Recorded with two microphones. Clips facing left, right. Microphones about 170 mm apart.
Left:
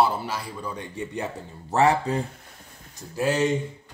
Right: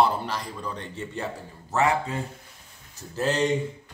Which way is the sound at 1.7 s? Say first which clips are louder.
Left 3 dB; 35° left (ahead or behind).